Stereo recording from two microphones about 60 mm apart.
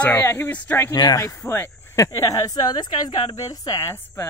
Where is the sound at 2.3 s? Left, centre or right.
Left.